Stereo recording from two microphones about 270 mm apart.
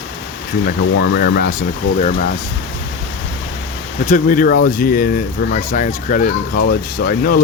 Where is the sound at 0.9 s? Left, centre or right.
Left.